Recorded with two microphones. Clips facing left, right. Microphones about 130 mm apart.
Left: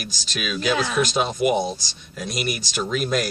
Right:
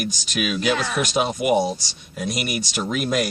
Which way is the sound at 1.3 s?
10° right (ahead or behind).